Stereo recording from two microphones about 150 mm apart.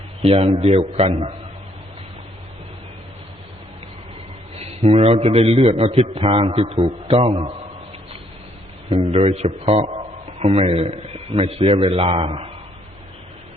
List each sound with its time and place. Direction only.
0.3 s a man's voice: 45° right (ahead or behind)
4.8 s a man's voice: 45° right (ahead or behind)
9.1 s a man's voice: 45° right (ahead or behind)